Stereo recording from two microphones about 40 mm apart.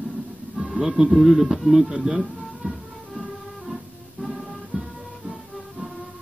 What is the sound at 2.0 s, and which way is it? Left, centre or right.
Music, centre.